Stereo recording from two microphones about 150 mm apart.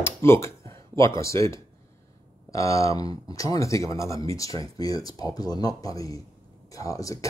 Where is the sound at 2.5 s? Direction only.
20° left (ahead or behind).